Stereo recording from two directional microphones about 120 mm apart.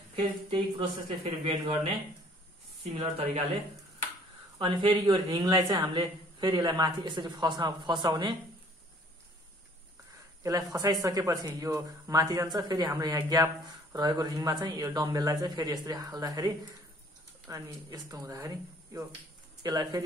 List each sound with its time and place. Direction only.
0.1 s speech: 50° right (ahead or behind)
4.6 s a woman's voice: 45° right (ahead or behind)
10.4 s a woman's voice: 30° right (ahead or behind)
19.6 s a woman's voice: 30° right (ahead or behind)